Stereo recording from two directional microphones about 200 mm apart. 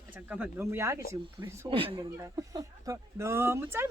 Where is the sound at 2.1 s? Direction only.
15° right (ahead or behind).